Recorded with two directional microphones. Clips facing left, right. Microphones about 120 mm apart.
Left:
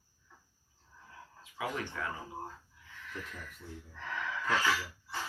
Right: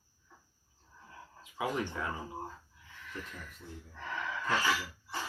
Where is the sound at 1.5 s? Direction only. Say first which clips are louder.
Right 3 dB; 20° right (ahead or behind).